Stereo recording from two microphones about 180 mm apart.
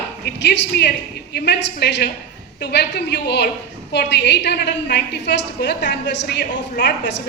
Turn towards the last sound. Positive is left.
turn(degrees=75)  # may be behind; listen again after turning